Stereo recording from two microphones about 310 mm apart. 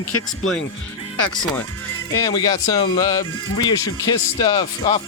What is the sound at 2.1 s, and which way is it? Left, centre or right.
Speech, centre.